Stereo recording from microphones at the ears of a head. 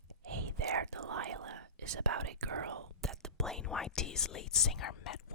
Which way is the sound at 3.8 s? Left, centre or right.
Left.